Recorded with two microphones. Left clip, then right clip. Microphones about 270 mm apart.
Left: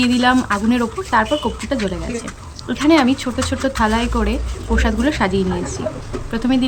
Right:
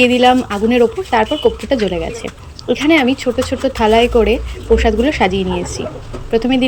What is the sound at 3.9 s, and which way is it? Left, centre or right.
Speech, left.